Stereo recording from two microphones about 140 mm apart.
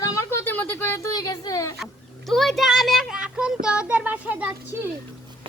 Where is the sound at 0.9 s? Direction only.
25° left (ahead or behind).